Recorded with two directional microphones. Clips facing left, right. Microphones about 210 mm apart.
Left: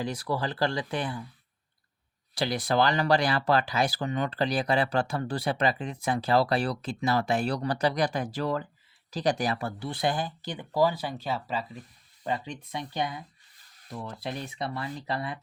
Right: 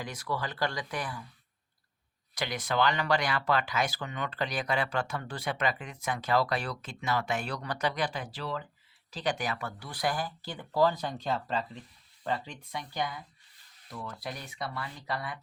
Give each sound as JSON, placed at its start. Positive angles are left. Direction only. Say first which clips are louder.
{"t": 0.0, "sound": "speech", "louder": "left 5 dB", "side_deg": 30}
{"t": 2.3, "sound": "speech", "louder": "left 5 dB", "side_deg": 35}
{"t": 12.2, "sound": "speech", "louder": "left 2 dB", "side_deg": 15}